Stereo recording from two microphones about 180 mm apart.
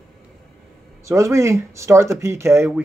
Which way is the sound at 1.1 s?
15° right (ahead or behind).